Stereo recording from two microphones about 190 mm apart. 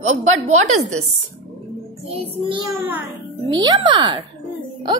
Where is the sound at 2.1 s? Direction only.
30° right (ahead or behind).